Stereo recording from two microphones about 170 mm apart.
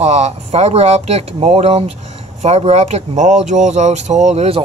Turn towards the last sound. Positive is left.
turn(degrees=-40)  # may be behind; listen again after turning